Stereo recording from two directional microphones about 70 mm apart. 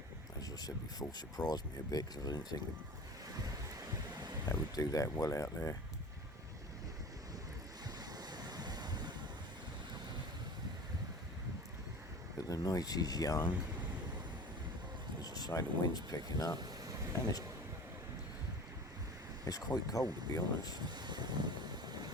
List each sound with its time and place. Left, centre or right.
0.4 s speech: left
3.4 s a sound: right
4.4 s speech: left
7.9 s vehicle: right
12.4 s speech: left
15.2 s speech: left
16.6 s vehicle: right
19.5 s speech: left
20.7 s vehicle: right